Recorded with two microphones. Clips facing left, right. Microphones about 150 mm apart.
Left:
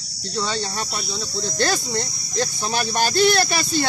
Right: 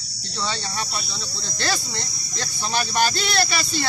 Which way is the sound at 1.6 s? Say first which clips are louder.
Left 4 dB; 45° left (ahead or behind).